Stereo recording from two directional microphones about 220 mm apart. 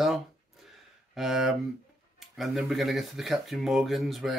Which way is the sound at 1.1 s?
Centre (ahead or behind).